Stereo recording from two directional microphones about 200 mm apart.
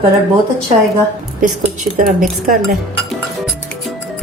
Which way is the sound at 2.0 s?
45° right (ahead or behind).